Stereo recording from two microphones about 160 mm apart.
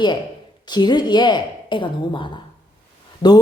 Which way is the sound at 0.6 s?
25° left (ahead or behind).